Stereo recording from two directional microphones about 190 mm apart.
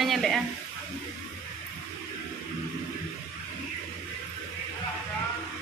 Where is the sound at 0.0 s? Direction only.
Centre (ahead or behind).